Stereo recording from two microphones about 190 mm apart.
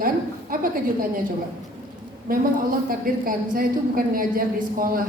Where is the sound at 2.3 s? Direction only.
50° right (ahead or behind).